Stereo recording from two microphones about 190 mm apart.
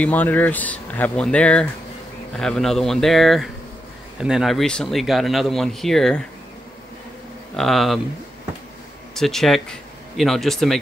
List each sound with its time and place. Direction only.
0.0 s speech: 10° left (ahead or behind)
7.5 s speech: centre (ahead or behind)
9.1 s speech: centre (ahead or behind)